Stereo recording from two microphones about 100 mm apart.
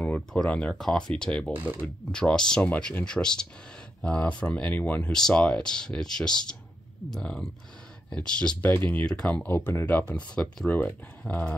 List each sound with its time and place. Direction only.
0.0 s a sound: 15° left (ahead or behind)
0.5 s speech: 10° left (ahead or behind)
1.5 s speech: 15° right (ahead or behind)
2.1 s speech: 5° left (ahead or behind)
9.5 s speech: 20° left (ahead or behind)